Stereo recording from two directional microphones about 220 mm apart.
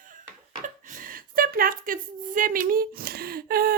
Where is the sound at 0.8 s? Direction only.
35° right (ahead or behind).